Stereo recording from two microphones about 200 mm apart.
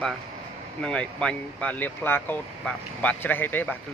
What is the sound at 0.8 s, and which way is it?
Speech, 5° left (ahead or behind).